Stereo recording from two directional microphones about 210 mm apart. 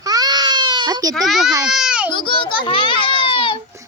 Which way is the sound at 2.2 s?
25° left (ahead or behind).